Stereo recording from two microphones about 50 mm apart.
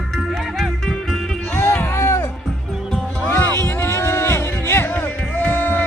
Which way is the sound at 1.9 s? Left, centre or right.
Left.